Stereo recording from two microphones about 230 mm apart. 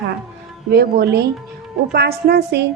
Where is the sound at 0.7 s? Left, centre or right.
Right.